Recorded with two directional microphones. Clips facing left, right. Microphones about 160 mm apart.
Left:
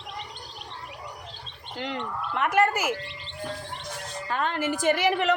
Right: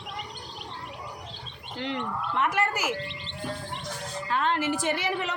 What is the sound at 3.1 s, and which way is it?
Music, 20° right (ahead or behind).